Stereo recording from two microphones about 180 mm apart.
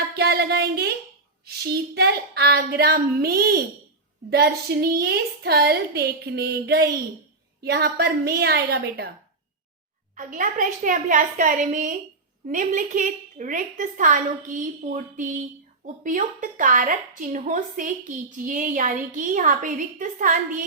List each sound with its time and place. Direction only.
0.2 s a woman's voice: 65° right (ahead or behind)
10.2 s a woman's voice: 45° right (ahead or behind)